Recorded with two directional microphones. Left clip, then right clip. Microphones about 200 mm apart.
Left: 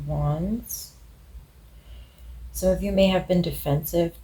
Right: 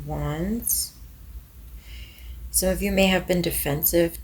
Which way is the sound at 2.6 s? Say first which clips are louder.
Left 1 dB; 45° right (ahead or behind).